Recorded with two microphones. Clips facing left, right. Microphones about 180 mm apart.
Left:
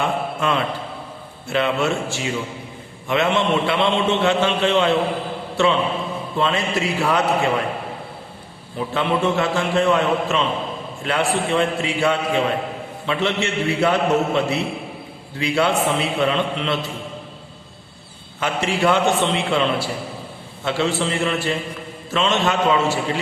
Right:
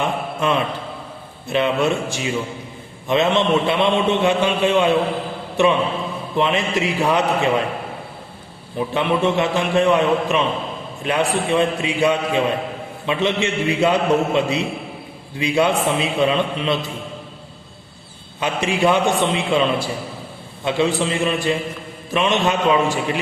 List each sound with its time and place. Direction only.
0.0 s a man's voice: 20° right (ahead or behind)
8.9 s a man's voice: 20° right (ahead or behind)
18.3 s a man's voice: 15° right (ahead or behind)